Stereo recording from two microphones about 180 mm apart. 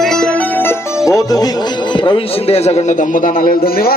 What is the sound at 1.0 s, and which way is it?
Speech, 20° left (ahead or behind).